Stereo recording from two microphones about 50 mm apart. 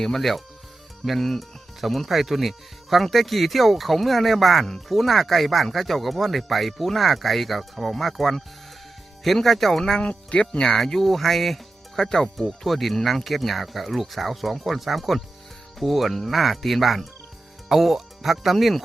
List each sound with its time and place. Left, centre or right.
0.0 s speech: centre
10.0 s speech: left
10.8 s speech: centre